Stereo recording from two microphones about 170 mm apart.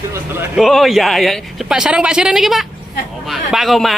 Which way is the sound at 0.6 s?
Centre (ahead or behind).